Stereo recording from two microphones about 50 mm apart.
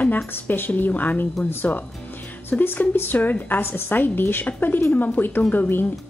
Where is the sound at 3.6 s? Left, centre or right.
Left.